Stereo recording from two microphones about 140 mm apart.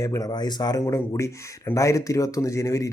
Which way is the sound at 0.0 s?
25° left (ahead or behind).